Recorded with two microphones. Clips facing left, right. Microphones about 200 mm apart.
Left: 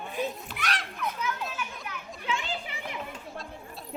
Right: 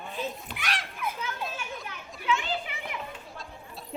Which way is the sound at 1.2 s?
30° right (ahead or behind).